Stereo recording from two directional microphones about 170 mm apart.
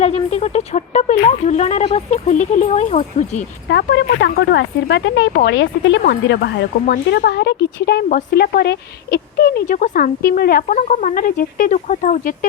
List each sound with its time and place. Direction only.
0.0 s speech: 40° left (ahead or behind)
3.7 s speech: 90° left
6.0 s speech: 75° left (ahead or behind); by 12.5 s 50° left (ahead or behind)